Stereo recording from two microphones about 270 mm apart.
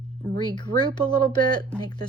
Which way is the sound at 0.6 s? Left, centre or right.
Centre.